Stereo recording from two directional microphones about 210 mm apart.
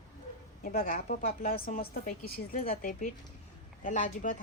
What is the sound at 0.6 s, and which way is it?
A woman's voice, 45° left (ahead or behind).